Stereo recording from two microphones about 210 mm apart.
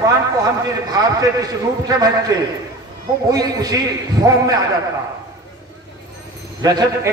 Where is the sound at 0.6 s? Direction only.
15° right (ahead or behind).